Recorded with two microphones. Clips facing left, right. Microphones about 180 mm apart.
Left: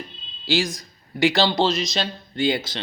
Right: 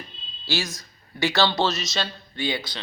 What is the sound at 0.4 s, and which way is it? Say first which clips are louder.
Speech: left 6 dB; 15° left (ahead or behind).